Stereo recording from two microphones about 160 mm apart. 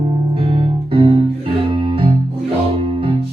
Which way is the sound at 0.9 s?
35° right (ahead or behind).